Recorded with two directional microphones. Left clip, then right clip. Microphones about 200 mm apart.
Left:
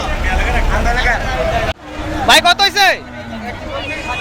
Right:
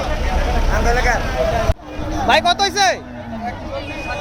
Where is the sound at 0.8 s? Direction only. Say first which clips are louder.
Left 1 dB; 60° right (ahead or behind).